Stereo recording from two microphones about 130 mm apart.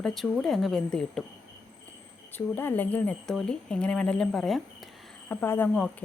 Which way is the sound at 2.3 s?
15° left (ahead or behind).